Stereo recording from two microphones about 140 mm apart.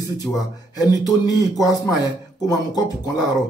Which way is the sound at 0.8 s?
25° left (ahead or behind).